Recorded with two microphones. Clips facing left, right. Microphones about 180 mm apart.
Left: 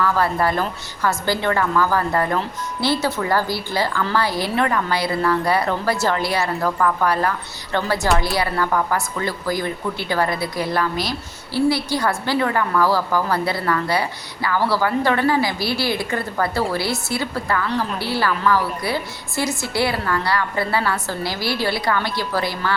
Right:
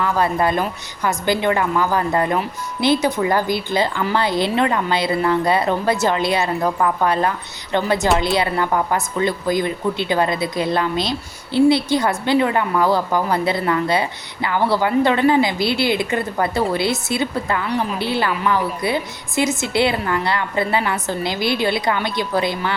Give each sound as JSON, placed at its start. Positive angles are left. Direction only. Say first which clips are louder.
{"t": 0.0, "sound": "a woman's voice", "louder": "right 1 dB", "side_deg": -20}